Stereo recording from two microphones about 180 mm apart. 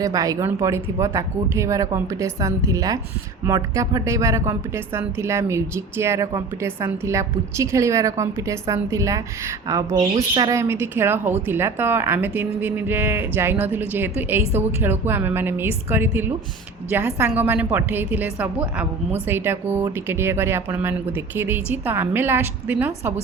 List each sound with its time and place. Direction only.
0.0 s speech: 20° right (ahead or behind)